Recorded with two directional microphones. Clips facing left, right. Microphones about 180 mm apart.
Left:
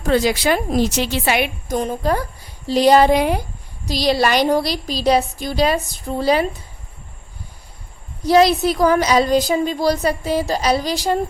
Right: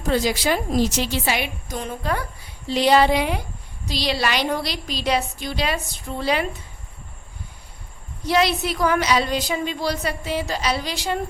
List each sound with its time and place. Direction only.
0.1 s a woman's voice: 70° left (ahead or behind); by 6.5 s 40° left (ahead or behind)
8.2 s a woman's voice: 40° left (ahead or behind)